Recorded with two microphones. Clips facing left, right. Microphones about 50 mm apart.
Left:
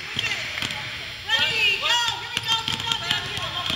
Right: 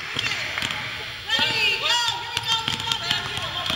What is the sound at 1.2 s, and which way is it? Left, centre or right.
Basketball bounce, left.